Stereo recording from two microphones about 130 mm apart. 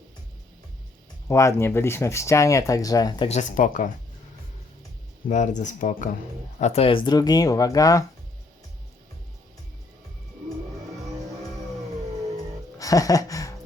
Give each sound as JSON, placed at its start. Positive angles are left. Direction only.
{"t": 1.3, "sound": "speech", "side_deg": 20}
{"t": 3.2, "sound": "speech", "side_deg": 70}
{"t": 5.3, "sound": "speech", "side_deg": 70}
{"t": 6.6, "sound": "speech", "side_deg": 55}
{"t": 12.8, "sound": "speech", "side_deg": 25}